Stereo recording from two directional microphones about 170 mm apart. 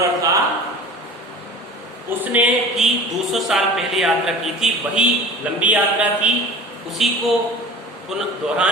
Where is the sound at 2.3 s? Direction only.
5° right (ahead or behind).